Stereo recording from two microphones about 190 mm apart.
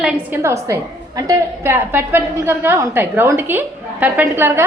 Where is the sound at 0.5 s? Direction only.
15° right (ahead or behind).